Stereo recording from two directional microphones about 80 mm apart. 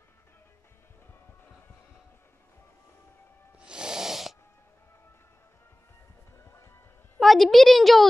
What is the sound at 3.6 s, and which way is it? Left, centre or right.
Snort, centre.